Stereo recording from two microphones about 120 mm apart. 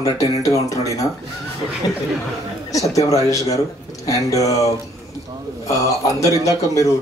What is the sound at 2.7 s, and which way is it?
Speech, 30° left (ahead or behind).